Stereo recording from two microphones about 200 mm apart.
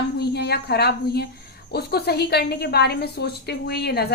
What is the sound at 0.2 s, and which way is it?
A woman's voice, 55° left (ahead or behind).